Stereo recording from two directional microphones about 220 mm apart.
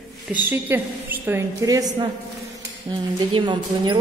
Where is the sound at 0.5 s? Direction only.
10° right (ahead or behind).